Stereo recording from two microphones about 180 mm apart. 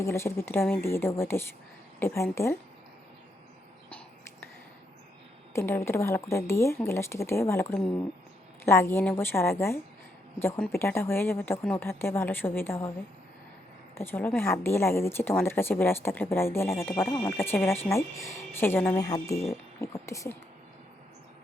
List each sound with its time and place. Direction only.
0.0 s a woman's voice: 15° left (ahead or behind)
3.8 s a sound: 10° left (ahead or behind)
5.5 s speech: 15° left (ahead or behind)
13.9 s speech: 10° left (ahead or behind)